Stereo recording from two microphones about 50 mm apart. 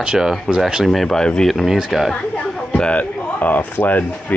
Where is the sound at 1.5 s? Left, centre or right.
Centre.